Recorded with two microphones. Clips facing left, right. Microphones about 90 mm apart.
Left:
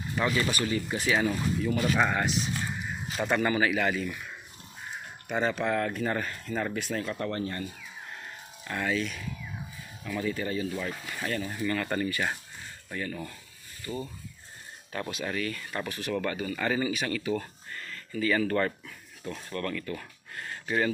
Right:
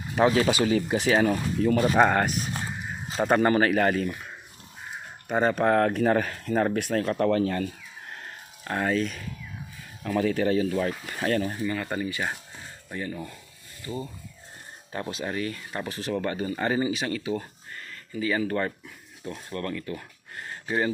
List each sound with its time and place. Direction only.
0.2 s speech: 70° right (ahead or behind)
1.7 s speech: 35° right (ahead or behind)
2.0 s speech: 55° right (ahead or behind)
3.1 s speech: 35° right (ahead or behind)
5.3 s speech: 40° right (ahead or behind); by 7.7 s 90° right
8.6 s speech: 40° right (ahead or behind)
10.0 s speech: 55° right (ahead or behind)
11.0 s speech: 40° right (ahead or behind)
11.6 s speech: 10° right (ahead or behind)